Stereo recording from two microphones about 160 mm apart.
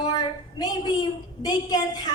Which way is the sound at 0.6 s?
25° left (ahead or behind).